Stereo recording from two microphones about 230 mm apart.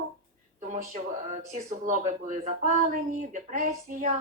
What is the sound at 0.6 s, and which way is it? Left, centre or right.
Speech, right.